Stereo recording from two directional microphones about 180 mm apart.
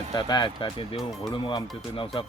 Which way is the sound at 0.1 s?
25° left (ahead or behind).